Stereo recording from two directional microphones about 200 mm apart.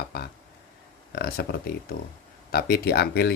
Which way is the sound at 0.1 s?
50° left (ahead or behind).